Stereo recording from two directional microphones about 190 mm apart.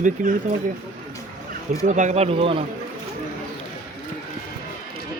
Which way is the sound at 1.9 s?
40° right (ahead or behind).